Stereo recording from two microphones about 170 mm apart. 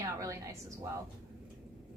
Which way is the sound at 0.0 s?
20° right (ahead or behind).